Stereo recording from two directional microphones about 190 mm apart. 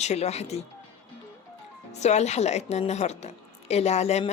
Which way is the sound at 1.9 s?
35° left (ahead or behind).